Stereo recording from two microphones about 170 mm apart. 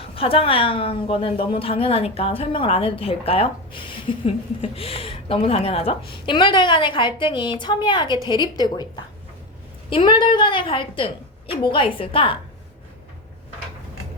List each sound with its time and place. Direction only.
0.0 s a woman's voice: 35° left (ahead or behind)